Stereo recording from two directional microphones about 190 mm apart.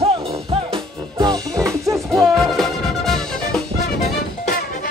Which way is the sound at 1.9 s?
Centre (ahead or behind).